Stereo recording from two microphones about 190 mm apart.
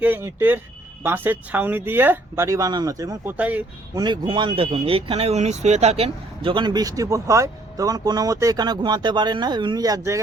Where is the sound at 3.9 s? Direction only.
20° right (ahead or behind).